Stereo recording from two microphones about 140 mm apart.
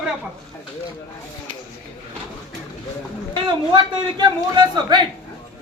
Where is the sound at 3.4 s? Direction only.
35° right (ahead or behind).